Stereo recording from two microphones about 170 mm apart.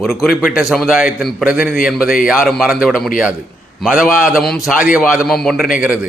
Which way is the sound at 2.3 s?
Centre (ahead or behind).